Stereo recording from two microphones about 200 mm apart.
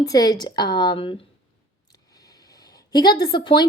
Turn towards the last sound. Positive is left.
turn(degrees=20)  # may be behind; listen again after turning